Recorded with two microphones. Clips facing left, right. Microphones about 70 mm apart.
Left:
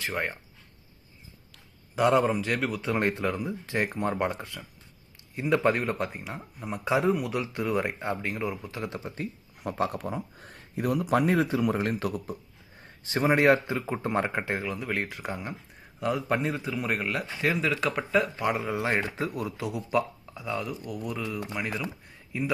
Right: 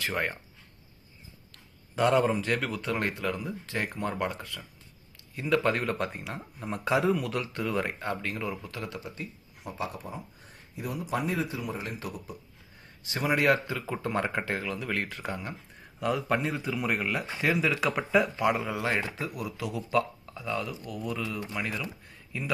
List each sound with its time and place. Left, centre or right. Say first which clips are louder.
0.0 s speech: even; centre
1.5 s speech: left 1 dB; centre
2.9 s speech: left 4 dB; left
9.6 s speech: left 6 dB; left
13.1 s speech: left 4 dB; left
16.0 s speech: left 1 dB; centre
18.7 s speech: left 2 dB; left
19.7 s speech: right 1 dB; centre